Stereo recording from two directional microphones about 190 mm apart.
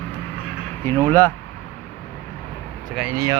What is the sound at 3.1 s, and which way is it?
Speech, 20° right (ahead or behind).